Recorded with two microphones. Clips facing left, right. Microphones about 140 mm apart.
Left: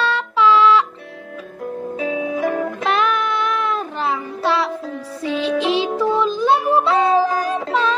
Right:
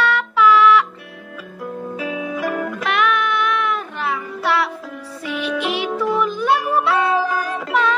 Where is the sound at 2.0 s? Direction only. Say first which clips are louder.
Left 4 dB; 20° left (ahead or behind).